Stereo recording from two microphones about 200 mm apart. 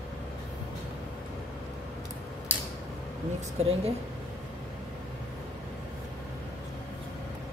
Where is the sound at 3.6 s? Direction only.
30° right (ahead or behind).